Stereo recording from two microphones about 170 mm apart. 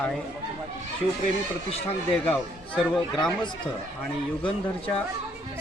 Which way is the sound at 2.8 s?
5° left (ahead or behind).